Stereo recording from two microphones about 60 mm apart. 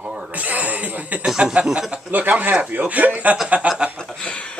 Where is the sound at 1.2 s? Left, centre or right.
Centre.